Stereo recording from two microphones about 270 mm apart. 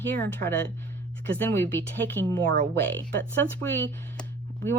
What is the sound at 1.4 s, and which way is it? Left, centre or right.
Speech, centre.